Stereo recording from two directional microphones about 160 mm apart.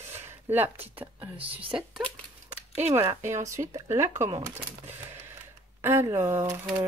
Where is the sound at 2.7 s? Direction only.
15° right (ahead or behind).